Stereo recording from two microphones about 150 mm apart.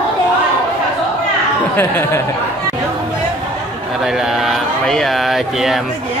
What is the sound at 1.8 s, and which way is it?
Speech, 15° left (ahead or behind).